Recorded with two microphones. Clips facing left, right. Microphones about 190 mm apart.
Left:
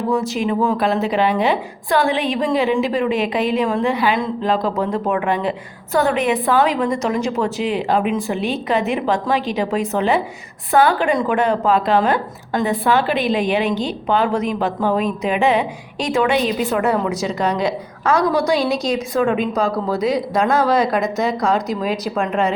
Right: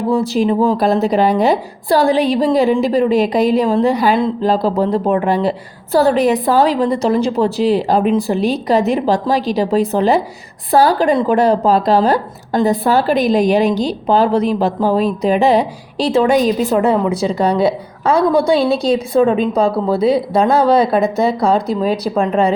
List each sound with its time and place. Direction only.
0.1 s speech: 35° right (ahead or behind)